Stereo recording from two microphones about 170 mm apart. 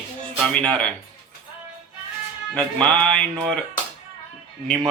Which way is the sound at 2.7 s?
5° left (ahead or behind).